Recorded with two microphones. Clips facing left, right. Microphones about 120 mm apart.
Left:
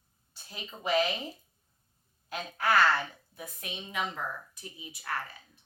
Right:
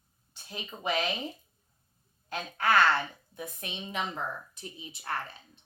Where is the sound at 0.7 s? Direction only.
10° right (ahead or behind).